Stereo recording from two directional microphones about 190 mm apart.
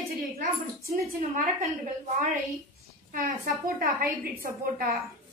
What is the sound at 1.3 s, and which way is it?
Speech, 45° right (ahead or behind).